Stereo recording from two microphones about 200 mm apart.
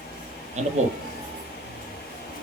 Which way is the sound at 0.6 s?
35° right (ahead or behind).